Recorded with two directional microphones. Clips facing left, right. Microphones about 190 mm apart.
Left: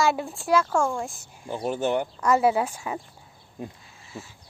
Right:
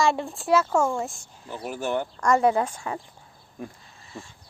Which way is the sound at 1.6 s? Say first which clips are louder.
Left 3 dB; 25° left (ahead or behind).